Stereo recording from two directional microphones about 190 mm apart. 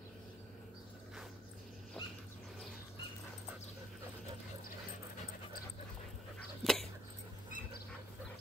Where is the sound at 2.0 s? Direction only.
5° left (ahead or behind).